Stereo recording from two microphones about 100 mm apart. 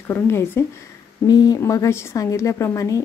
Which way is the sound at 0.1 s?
25° left (ahead or behind).